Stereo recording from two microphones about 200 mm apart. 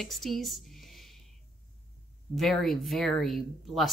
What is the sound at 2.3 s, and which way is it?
Speech, centre (ahead or behind).